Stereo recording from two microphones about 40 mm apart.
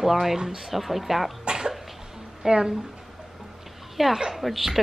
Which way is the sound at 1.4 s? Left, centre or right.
Right.